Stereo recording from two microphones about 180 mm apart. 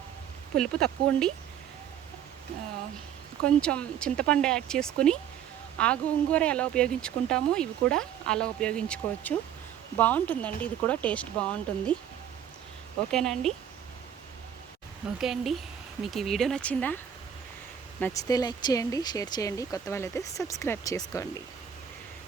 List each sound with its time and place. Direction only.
0.5 s speech: 5° left (ahead or behind)
3.4 s speech: 5° left (ahead or behind)
13.1 s speech: 5° left (ahead or behind)
15.2 s speech: centre (ahead or behind)
18.0 s speech: 20° left (ahead or behind)